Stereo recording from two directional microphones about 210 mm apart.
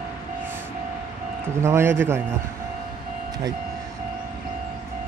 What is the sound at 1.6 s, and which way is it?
Speech, 10° right (ahead or behind).